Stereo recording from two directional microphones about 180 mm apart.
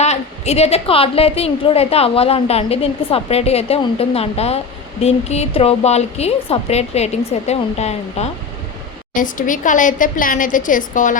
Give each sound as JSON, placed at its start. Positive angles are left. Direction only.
{"t": 0.0, "sound": "a woman's voice", "side_deg": 35}
{"t": 9.1, "sound": "a woman's voice", "side_deg": 45}